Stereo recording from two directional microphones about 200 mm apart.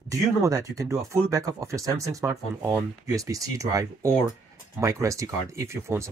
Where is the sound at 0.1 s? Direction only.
15° right (ahead or behind).